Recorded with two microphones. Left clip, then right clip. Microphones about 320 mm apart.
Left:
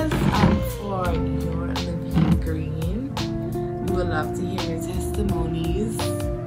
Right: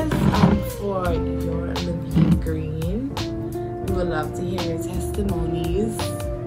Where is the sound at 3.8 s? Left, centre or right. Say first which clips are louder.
Right 1 dB; centre.